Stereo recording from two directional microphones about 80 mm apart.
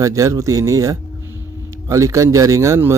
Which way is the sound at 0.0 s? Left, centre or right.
Right.